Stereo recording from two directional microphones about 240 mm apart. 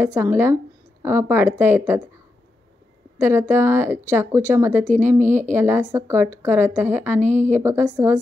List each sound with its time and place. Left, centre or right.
0.0 s a woman's voice: centre
3.2 s a woman's voice: centre
7.2 s speech: right
7.6 s a woman's voice: centre